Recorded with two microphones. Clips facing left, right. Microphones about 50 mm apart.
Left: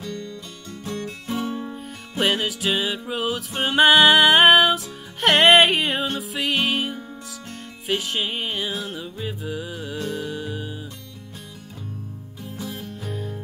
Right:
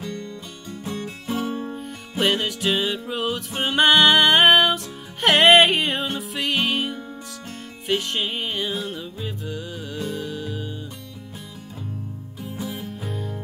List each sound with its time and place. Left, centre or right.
0.0 s music: right
0.7 s music: centre
1.6 s music: centre
12.4 s music: centre